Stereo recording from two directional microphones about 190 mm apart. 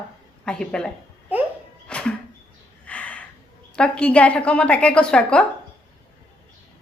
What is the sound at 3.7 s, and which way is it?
A woman's voice, 5° left (ahead or behind).